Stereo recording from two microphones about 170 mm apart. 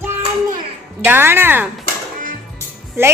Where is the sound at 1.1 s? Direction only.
15° right (ahead or behind).